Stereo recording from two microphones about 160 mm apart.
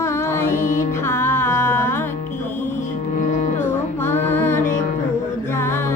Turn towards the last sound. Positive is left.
turn(degrees=15)  # may be behind; listen again after turning